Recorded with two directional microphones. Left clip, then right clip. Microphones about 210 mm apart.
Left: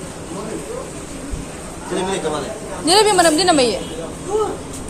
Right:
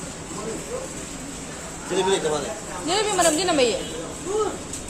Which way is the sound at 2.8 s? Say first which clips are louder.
Left 8 dB; 25° left (ahead or behind).